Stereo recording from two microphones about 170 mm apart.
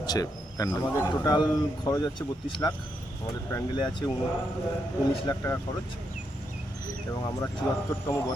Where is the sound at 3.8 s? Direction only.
25° left (ahead or behind).